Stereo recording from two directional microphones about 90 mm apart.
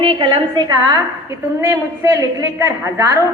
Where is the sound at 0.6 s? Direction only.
45° right (ahead or behind).